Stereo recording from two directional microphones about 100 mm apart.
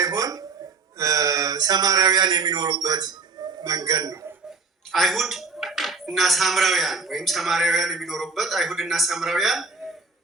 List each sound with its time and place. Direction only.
0.0 s a sound: 35° right (ahead or behind)
0.9 s speech: 35° right (ahead or behind)
4.9 s speech: centre (ahead or behind)